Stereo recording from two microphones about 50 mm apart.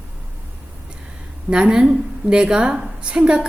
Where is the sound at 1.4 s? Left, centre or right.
Centre.